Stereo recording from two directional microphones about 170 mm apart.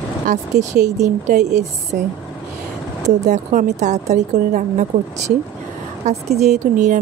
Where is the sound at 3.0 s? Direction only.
45° right (ahead or behind).